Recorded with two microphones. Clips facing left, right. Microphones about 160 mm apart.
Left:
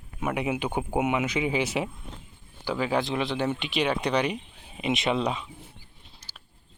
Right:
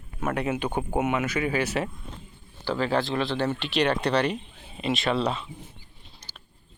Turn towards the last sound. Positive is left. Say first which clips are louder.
# right 2 dB
turn(degrees=5)  # may be behind; listen again after turning